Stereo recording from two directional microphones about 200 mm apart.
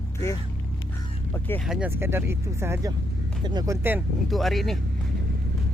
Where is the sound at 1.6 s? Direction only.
5° right (ahead or behind).